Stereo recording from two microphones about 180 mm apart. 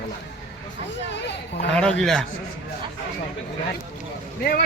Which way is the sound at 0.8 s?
75° left (ahead or behind).